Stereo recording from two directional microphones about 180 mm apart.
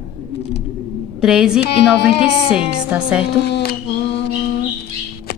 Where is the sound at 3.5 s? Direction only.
60° left (ahead or behind).